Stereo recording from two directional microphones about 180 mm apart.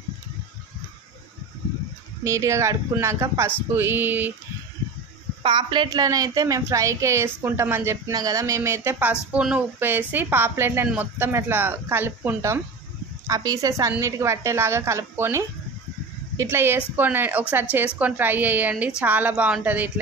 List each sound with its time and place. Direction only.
2.2 s a woman's voice: 15° right (ahead or behind)
5.4 s a woman's voice: 25° right (ahead or behind); by 19.9 s 10° right (ahead or behind)